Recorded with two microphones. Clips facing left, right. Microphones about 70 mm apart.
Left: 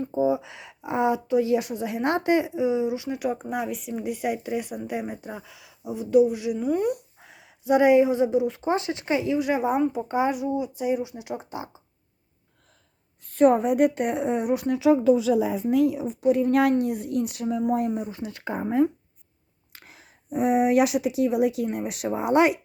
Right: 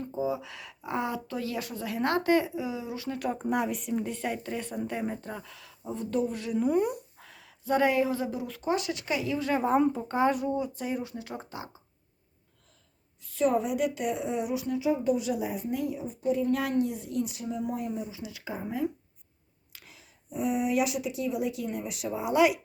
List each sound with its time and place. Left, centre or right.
0.0 s speech: left; by 6.7 s centre
6.7 s speech: centre
7.2 s speech: centre
13.2 s speech: left
15.6 s speech: left